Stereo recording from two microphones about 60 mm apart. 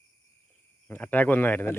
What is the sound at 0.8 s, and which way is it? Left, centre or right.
Speech, left.